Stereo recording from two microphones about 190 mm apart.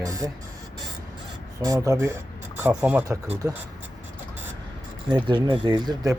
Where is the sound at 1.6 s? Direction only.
15° right (ahead or behind).